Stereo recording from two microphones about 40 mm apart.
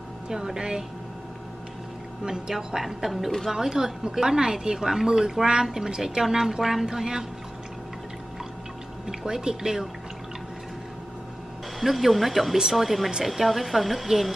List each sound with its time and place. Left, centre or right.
0.3 s a woman's voice: centre
2.2 s a woman's voice: centre
3.5 s a woman's voice: centre
9.2 s a woman's voice: centre
11.8 s speech: centre